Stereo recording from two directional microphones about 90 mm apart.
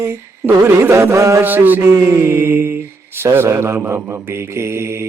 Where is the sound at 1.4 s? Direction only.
20° right (ahead or behind).